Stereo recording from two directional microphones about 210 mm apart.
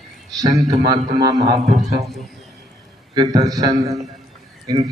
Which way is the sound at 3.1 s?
20° right (ahead or behind).